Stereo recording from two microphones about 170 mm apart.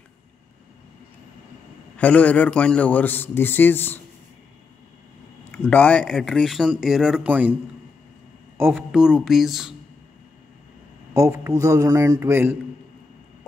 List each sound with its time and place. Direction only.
2.0 s a man's voice: 10° left (ahead or behind)
5.5 s speech: 10° left (ahead or behind); by 7.5 s 10° right (ahead or behind)
8.5 s speech: 10° right (ahead or behind)
11.1 s a man's voice: 15° right (ahead or behind)